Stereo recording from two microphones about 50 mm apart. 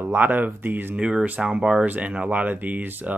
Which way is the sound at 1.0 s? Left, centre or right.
Right.